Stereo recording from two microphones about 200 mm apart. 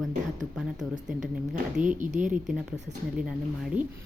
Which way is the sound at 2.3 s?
5° right (ahead or behind).